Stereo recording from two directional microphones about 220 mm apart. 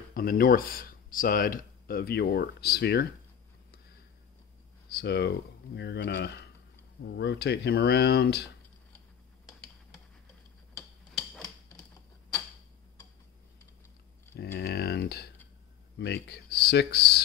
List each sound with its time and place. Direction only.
0.1 s speech: 40° left (ahead or behind)
4.9 s speech: 50° left (ahead or behind)
11.1 s a sound: centre (ahead or behind)
14.3 s speech: 50° left (ahead or behind)